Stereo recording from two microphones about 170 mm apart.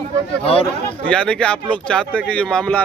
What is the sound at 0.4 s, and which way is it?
Speech, 35° left (ahead or behind).